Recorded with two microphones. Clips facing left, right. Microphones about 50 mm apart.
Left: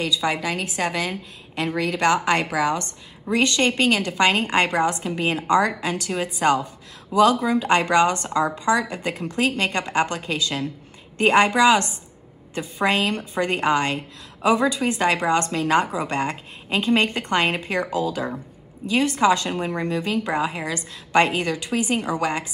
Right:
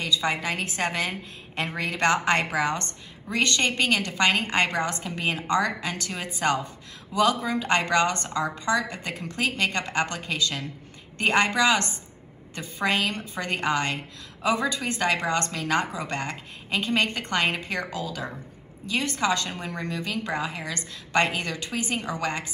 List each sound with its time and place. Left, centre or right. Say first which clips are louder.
0.2 s a woman's voice: left 3 dB; right
3.3 s a woman's voice: left 4 dB; left